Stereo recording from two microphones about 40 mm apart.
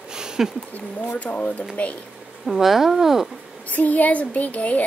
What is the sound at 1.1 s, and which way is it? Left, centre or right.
Speech, left.